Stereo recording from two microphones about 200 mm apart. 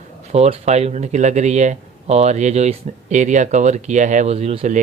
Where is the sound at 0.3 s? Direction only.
30° right (ahead or behind).